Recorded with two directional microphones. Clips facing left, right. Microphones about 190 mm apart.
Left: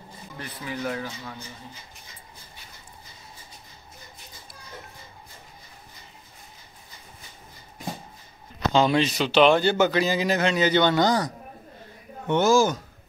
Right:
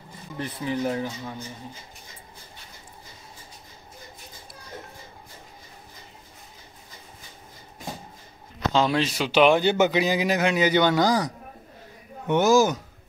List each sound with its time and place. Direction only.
0.4 s speech: 25° right (ahead or behind)
8.7 s speech: centre (ahead or behind)
12.3 s speech: 15° right (ahead or behind)